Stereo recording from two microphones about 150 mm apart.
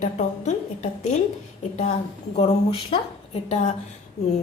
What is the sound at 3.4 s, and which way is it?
Speech, 50° left (ahead or behind).